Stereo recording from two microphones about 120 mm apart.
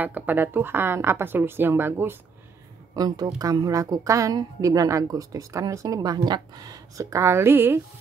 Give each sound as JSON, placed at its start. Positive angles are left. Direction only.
{"t": 0.0, "sound": "a woman's voice", "side_deg": -15}
{"t": 3.0, "sound": "a woman's voice", "side_deg": -35}